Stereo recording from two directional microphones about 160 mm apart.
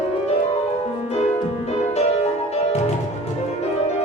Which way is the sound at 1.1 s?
40° left (ahead or behind).